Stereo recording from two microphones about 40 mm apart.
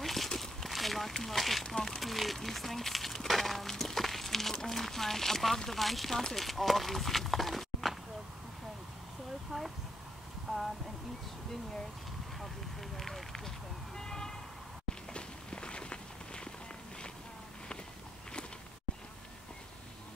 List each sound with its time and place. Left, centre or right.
0.0 s a sound: centre
5.7 s speech: centre
10.5 s a sound: centre
12.9 s speech: centre
13.9 s vehicle: centre
15.1 s walk: left